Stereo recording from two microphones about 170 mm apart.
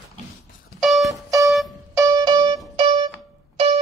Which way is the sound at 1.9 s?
20° right (ahead or behind).